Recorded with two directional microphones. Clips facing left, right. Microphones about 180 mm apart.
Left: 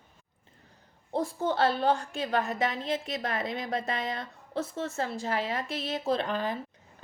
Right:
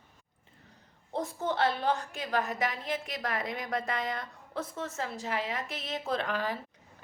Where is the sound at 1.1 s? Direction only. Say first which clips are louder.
Left 3 dB; 30° left (ahead or behind).